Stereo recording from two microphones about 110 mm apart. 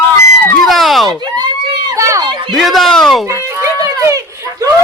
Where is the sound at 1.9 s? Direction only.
30° right (ahead or behind).